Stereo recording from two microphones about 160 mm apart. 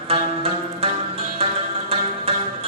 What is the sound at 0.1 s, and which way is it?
Music, 35° right (ahead or behind).